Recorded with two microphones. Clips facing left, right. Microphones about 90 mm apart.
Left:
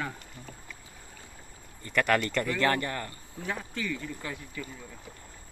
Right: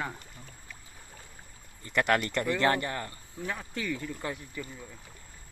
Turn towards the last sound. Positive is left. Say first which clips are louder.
# even
turn(degrees=-15)  # may be behind; listen again after turning